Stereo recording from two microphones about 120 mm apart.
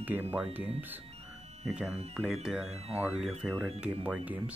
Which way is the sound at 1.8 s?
60° right (ahead or behind).